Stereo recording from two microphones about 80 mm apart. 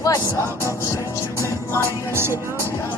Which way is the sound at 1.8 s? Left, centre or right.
Right.